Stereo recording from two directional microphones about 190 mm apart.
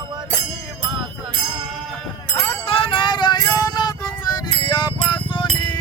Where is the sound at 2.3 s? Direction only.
10° left (ahead or behind).